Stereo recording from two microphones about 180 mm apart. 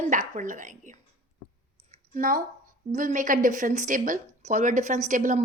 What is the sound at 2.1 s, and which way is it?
A woman's voice, 50° right (ahead or behind).